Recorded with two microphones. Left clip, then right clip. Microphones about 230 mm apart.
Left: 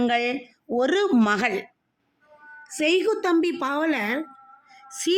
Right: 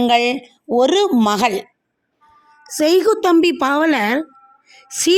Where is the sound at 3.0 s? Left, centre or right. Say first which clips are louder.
Right 8 dB; right.